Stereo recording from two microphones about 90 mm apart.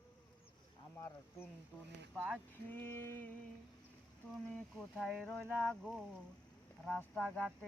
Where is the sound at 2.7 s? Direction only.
25° left (ahead or behind).